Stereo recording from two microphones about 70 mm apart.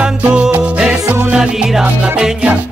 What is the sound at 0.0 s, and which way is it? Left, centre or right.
Music, centre.